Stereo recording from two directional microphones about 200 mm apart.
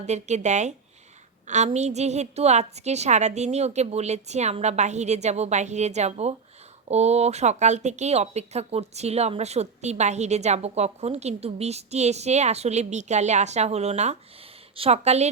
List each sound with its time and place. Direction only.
0.0 s a woman's voice: 35° right (ahead or behind)